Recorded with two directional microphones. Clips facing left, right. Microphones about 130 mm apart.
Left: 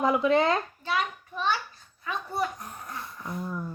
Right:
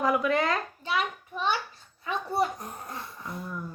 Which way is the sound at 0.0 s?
25° left (ahead or behind).